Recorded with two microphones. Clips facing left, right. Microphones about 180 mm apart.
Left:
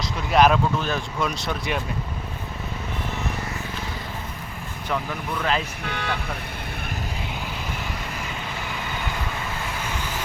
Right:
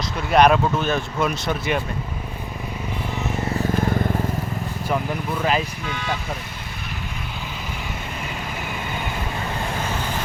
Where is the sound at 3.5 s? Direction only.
50° right (ahead or behind).